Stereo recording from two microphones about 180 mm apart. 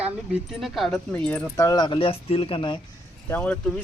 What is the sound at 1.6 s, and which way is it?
Speech, 20° left (ahead or behind).